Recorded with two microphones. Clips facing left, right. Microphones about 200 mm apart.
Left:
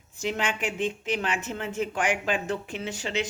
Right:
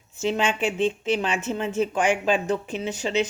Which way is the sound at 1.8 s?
20° right (ahead or behind).